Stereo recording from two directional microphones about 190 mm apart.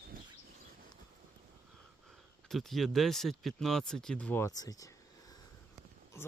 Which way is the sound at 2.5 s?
Centre (ahead or behind).